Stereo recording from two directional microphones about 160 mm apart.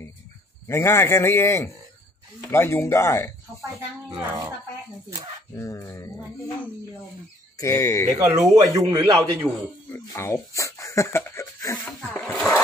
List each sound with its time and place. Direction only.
0.7 s speech: 15° left (ahead or behind)
3.6 s speech: 25° right (ahead or behind)
5.5 s speech: 20° left (ahead or behind)
8.3 s speech: 20° right (ahead or behind)
9.9 s speech: 15° left (ahead or behind)
12.1 s sewing machine: centre (ahead or behind)